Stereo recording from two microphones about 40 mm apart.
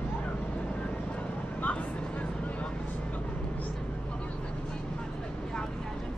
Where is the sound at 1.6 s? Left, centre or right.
Left.